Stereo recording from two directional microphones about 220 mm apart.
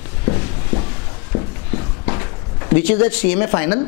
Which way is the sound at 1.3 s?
30° left (ahead or behind).